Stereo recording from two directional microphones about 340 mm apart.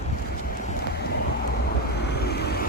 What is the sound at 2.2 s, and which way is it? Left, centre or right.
Vehicle, left.